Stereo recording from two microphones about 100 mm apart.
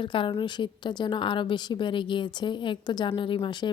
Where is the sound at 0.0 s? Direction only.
55° left (ahead or behind).